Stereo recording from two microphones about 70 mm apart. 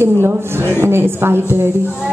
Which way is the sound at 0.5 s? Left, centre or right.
Right.